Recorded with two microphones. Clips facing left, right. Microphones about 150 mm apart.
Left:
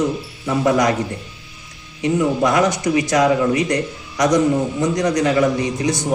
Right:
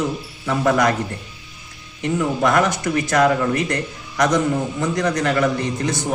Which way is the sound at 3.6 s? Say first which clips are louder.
Left 4 dB; 20° left (ahead or behind).